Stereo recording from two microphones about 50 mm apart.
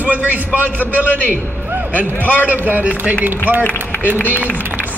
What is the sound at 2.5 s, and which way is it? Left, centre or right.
A man's voice, right.